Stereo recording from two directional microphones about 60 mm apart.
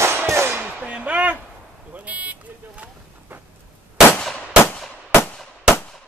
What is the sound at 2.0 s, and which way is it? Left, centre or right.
Vehicle, right.